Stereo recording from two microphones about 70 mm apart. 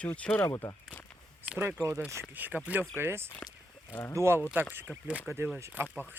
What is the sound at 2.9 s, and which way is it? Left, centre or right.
Speech, right.